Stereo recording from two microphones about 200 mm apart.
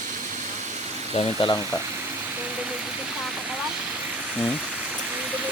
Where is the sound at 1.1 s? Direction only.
25° left (ahead or behind).